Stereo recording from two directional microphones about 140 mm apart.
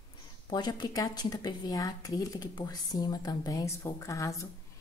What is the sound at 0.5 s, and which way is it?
A woman's voice, 30° left (ahead or behind).